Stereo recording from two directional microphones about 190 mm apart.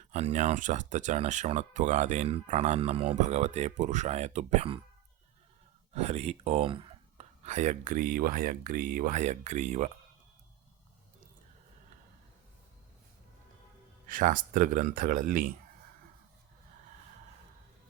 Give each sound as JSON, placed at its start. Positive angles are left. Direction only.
{"t": 0.1, "sound": "speech", "side_deg": -35}
{"t": 5.9, "sound": "speech", "side_deg": -35}
{"t": 14.1, "sound": "speech", "side_deg": -45}